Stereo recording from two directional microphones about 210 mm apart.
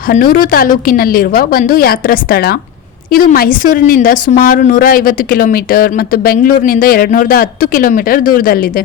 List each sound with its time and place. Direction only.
0.1 s a woman's voice: 40° left (ahead or behind)